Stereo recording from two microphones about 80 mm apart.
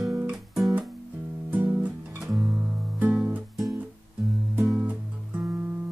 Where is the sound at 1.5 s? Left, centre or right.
Right.